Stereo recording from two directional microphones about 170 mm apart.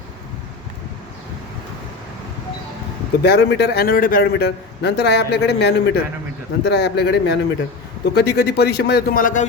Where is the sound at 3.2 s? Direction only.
75° left (ahead or behind).